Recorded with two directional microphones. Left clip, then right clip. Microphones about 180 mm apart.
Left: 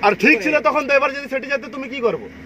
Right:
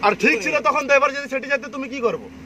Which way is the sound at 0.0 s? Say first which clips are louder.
Left 3 dB; 45° left (ahead or behind).